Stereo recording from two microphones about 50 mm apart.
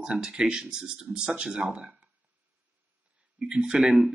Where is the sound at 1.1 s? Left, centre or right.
Right.